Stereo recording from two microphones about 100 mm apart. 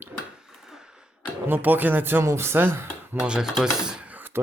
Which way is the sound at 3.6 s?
10° right (ahead or behind).